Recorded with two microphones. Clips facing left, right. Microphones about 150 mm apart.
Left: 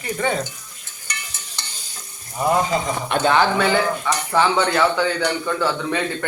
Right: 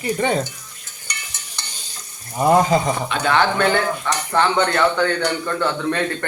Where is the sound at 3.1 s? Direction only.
55° left (ahead or behind).